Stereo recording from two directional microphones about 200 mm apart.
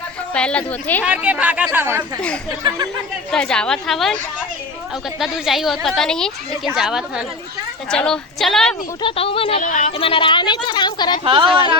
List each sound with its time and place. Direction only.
0.3 s a woman's voice: 5° left (ahead or behind)
1.0 s speech: 5° right (ahead or behind)
3.3 s a woman's voice: 5° left (ahead or behind)
5.2 s a woman's voice: centre (ahead or behind)
9.0 s speech: 25° left (ahead or behind)
11.2 s speech: 25° right (ahead or behind)